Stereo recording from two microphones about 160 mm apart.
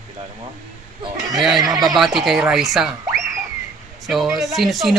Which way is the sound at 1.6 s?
20° right (ahead or behind).